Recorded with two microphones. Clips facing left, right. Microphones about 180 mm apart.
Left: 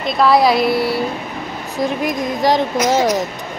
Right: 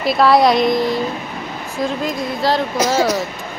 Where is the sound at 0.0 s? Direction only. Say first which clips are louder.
Right 1 dB; centre (ahead or behind); by 2.6 s 15° left (ahead or behind).